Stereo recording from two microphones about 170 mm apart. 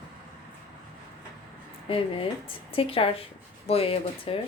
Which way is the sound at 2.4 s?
30° left (ahead or behind).